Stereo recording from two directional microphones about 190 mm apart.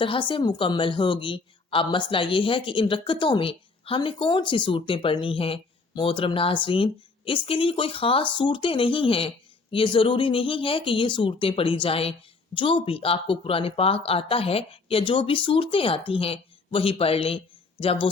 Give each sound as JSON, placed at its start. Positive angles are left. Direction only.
{"t": 0.0, "sound": "a woman's voice", "side_deg": 25}